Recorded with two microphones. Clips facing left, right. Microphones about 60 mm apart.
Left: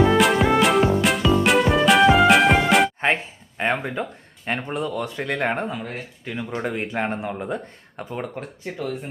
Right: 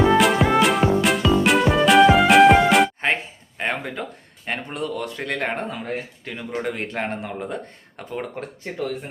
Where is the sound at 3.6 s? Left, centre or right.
Left.